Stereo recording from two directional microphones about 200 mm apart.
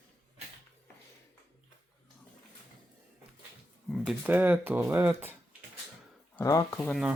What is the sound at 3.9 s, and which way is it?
Speech, 5° right (ahead or behind).